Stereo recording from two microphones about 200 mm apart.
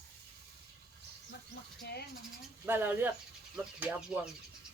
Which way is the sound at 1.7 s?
50° left (ahead or behind).